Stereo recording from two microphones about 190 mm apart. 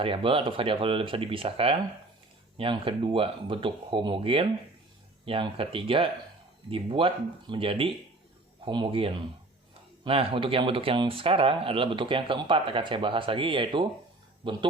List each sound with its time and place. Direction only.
0.0 s speech: 30° right (ahead or behind)